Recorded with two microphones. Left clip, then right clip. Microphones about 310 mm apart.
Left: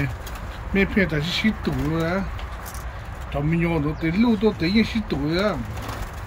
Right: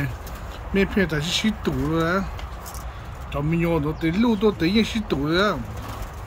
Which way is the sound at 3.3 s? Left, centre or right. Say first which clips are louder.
Right 1 dB; centre.